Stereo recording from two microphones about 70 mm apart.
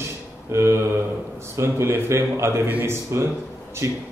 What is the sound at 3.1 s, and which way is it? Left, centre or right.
Speech, right.